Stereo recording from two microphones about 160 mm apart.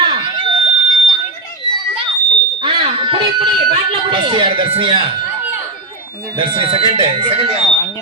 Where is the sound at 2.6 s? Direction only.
30° right (ahead or behind).